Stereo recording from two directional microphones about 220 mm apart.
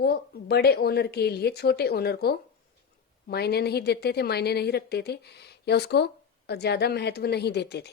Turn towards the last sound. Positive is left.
turn(degrees=50)  # may be behind; listen again after turning